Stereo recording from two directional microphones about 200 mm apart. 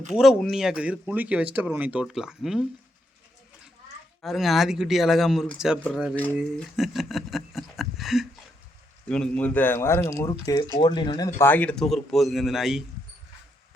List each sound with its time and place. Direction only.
0.1 s speech: centre (ahead or behind)
4.2 s speech: centre (ahead or behind); by 11.3 s 20° left (ahead or behind)
11.3 s speech: 10° left (ahead or behind)